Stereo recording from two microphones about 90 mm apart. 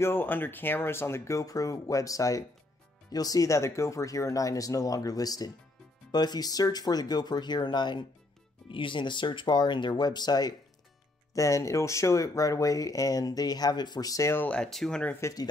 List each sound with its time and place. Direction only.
0.0 s speech: 25° left (ahead or behind); by 8.0 s 55° left (ahead or behind)
8.6 s speech: 70° left (ahead or behind); by 10.5 s 50° left (ahead or behind)
11.3 s speech: 35° left (ahead or behind)
14.3 s speech: 20° left (ahead or behind)
14.6 s speech: 5° left (ahead or behind)